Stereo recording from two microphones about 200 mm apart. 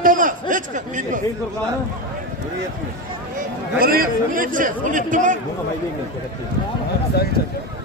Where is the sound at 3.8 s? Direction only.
50° right (ahead or behind).